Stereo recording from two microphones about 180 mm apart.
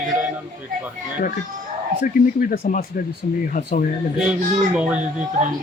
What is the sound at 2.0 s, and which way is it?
A man's voice, 55° left (ahead or behind).